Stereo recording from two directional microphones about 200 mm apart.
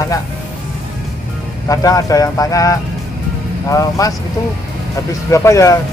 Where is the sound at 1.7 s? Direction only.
15° left (ahead or behind).